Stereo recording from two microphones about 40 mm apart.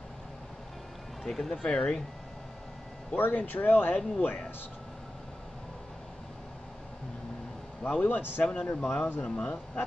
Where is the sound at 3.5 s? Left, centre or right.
Left.